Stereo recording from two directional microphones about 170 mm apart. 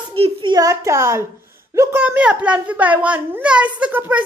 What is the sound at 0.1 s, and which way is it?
A child's voice, 30° right (ahead or behind).